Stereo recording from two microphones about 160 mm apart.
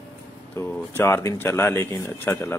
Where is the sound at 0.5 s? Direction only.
15° left (ahead or behind).